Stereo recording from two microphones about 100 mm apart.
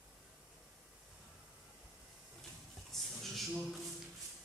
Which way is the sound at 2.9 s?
Centre (ahead or behind).